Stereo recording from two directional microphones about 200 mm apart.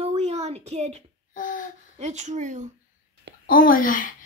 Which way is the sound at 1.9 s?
35° right (ahead or behind).